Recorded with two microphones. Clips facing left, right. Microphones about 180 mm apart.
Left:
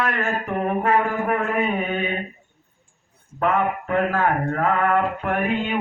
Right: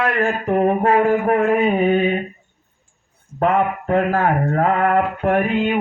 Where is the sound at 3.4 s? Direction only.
35° right (ahead or behind).